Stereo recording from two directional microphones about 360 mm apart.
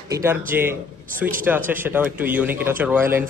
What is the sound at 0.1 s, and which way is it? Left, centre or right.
A man's voice, centre.